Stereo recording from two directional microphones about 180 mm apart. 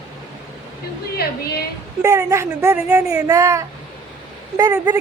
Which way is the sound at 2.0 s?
15° right (ahead or behind).